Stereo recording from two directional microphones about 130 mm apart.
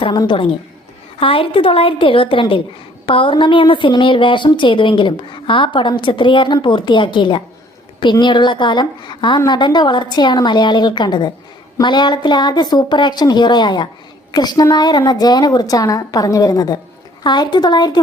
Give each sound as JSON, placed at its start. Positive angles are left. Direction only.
{"t": 0.0, "sound": "a woman's voice", "side_deg": 35}